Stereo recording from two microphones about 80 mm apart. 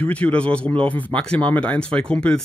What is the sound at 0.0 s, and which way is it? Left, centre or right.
Speech, centre.